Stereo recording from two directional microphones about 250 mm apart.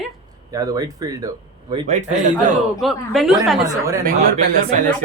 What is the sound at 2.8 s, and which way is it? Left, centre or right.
Speech, centre.